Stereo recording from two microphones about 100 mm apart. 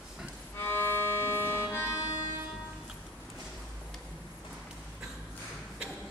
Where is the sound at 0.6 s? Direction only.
20° left (ahead or behind).